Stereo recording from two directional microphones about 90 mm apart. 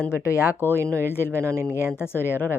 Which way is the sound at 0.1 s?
30° left (ahead or behind).